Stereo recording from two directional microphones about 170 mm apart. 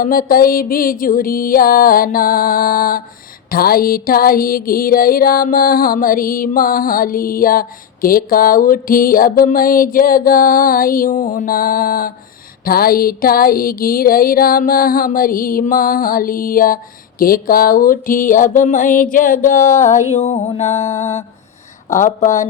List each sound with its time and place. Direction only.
0.0 s music: 55° left (ahead or behind); by 21.2 s 40° left (ahead or behind)
21.8 s speech: 45° left (ahead or behind)